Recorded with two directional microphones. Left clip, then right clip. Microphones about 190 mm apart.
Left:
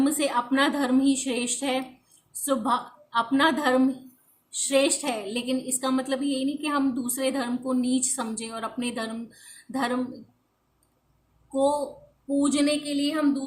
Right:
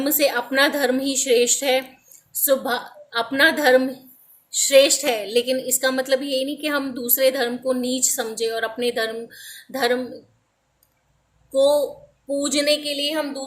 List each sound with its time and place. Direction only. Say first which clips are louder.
0.0 s a woman's voice: right 4 dB; 15° left (ahead or behind)
11.5 s a woman's voice: right 7 dB; 20° left (ahead or behind)